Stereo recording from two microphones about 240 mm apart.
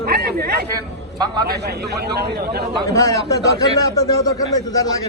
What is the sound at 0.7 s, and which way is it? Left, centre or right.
Speech, centre.